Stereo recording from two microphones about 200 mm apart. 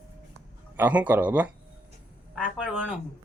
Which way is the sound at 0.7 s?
10° right (ahead or behind).